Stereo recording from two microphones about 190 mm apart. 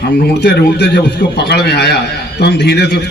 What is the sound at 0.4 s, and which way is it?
A man's voice, 60° left (ahead or behind).